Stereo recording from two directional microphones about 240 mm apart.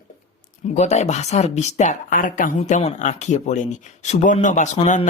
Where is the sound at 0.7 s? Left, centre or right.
Left.